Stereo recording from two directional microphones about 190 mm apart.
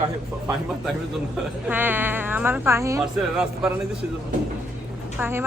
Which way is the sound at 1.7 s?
10° right (ahead or behind).